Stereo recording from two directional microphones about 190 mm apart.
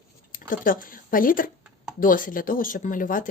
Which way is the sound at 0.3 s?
45° left (ahead or behind).